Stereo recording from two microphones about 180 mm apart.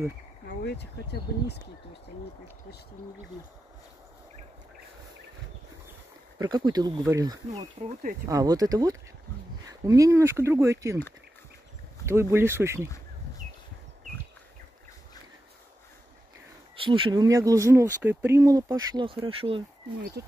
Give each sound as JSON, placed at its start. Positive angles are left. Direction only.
{"t": 0.6, "sound": "speech", "side_deg": 65}
{"t": 6.3, "sound": "speech", "side_deg": -20}
{"t": 12.1, "sound": "speech", "side_deg": -15}
{"t": 16.7, "sound": "speech", "side_deg": -30}
{"t": 18.9, "sound": "speech", "side_deg": -30}
{"t": 20.0, "sound": "speech", "side_deg": -60}